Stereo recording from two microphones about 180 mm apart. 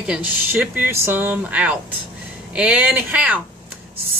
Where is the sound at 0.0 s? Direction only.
5° right (ahead or behind).